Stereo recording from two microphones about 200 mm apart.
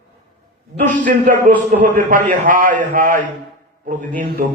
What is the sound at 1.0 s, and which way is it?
A man's voice, 40° right (ahead or behind).